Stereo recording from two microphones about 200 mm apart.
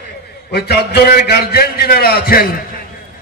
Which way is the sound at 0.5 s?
55° left (ahead or behind).